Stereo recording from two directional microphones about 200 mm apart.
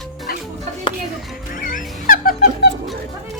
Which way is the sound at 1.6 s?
40° left (ahead or behind).